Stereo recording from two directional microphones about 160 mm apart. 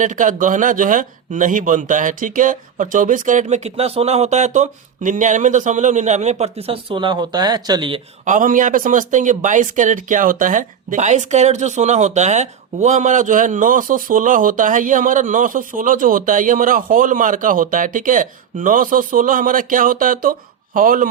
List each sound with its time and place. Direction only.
0.0 s speech: 55° right (ahead or behind); by 8.0 s 35° right (ahead or behind)
8.2 s speech: 50° right (ahead or behind)